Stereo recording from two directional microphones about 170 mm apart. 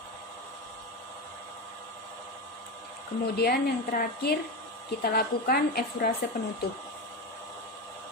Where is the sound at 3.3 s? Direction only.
65° left (ahead or behind).